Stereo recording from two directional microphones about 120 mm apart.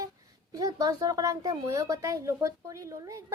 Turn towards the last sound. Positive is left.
turn(degrees=-25)  # may be behind; listen again after turning